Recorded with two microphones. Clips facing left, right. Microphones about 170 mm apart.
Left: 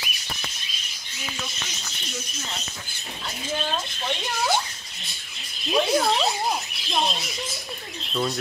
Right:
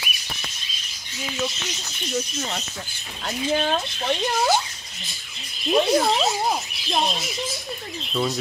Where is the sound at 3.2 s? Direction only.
55° right (ahead or behind).